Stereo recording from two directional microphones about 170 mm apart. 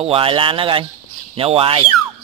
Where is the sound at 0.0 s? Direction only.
35° right (ahead or behind).